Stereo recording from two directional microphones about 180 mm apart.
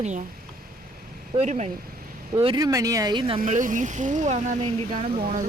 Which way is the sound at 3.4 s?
45° right (ahead or behind).